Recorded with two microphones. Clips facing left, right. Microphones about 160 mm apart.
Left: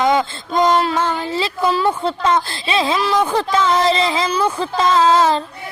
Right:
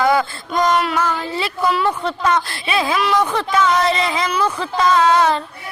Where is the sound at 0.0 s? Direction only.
20° left (ahead or behind).